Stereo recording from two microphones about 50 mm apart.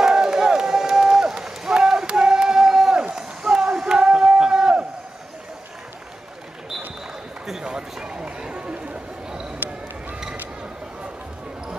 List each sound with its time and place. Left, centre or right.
0.0 s crowd: centre
7.6 s run: centre